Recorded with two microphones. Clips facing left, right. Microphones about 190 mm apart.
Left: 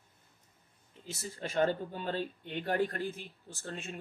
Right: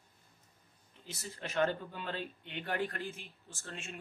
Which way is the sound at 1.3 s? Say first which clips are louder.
Left 3 dB; 35° left (ahead or behind).